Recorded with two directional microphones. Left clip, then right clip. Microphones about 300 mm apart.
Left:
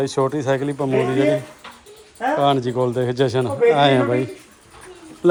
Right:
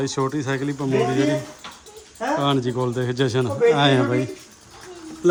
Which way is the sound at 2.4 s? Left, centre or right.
Centre.